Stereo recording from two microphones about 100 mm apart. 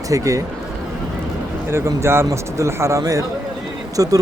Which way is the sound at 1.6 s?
25° right (ahead or behind).